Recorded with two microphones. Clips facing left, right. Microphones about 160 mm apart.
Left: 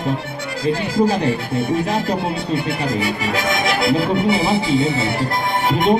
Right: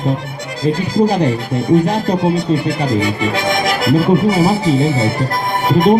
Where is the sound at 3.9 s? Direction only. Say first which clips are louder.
Right 5 dB; 45° right (ahead or behind).